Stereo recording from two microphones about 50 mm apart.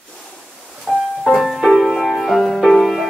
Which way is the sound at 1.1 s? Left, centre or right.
Centre.